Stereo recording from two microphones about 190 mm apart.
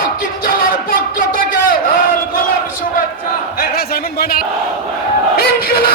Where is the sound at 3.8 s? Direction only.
55° left (ahead or behind).